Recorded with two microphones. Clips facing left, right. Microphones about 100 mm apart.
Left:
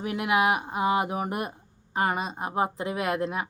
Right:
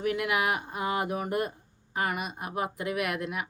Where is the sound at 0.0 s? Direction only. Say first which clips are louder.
Left 3 dB; 25° left (ahead or behind).